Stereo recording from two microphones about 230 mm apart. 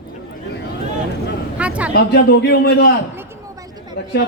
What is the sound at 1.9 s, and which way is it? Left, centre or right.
A man's voice, left.